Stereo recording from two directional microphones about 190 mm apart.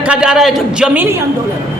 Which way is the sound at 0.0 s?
5° right (ahead or behind).